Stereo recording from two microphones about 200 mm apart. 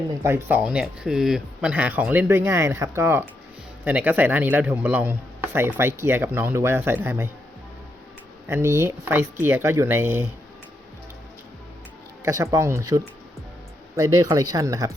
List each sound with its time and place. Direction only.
0.2 s speech: 10° right (ahead or behind)
8.4 s speech: 15° right (ahead or behind)
12.2 s speech: 15° right (ahead or behind)